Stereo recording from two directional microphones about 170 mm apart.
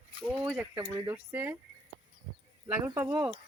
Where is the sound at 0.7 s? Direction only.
20° right (ahead or behind).